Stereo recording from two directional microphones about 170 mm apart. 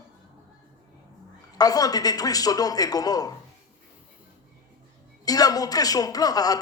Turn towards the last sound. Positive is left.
turn(degrees=20)  # may be behind; listen again after turning